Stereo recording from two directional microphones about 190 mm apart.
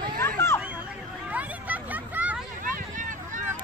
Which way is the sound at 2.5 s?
45° right (ahead or behind).